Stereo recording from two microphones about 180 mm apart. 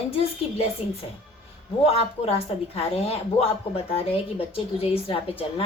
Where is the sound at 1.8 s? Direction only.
35° left (ahead or behind).